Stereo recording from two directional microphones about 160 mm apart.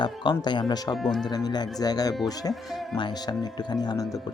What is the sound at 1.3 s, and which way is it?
Speech, 25° left (ahead or behind).